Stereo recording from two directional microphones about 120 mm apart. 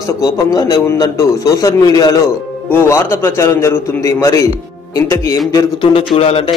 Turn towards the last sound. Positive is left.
turn(degrees=55)  # may be behind; listen again after turning